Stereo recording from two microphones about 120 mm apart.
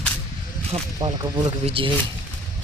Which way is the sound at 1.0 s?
35° right (ahead or behind).